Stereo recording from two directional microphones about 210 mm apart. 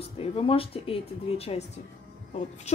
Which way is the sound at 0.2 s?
25° left (ahead or behind).